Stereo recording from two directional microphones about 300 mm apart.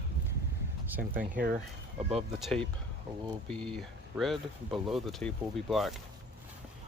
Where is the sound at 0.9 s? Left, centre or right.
Centre.